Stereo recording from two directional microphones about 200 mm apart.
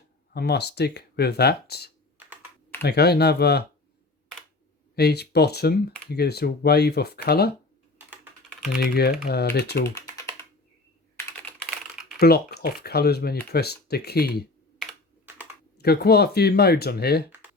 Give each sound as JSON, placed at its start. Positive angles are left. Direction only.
{"t": 0.3, "sound": "speech", "side_deg": 55}
{"t": 4.9, "sound": "speech", "side_deg": 55}
{"t": 7.9, "sound": "typing", "side_deg": -10}
{"t": 8.8, "sound": "speech", "side_deg": 50}
{"t": 11.2, "sound": "computer keyboard", "side_deg": 10}
{"t": 12.2, "sound": "speech", "side_deg": 55}
{"t": 15.8, "sound": "speech", "side_deg": 50}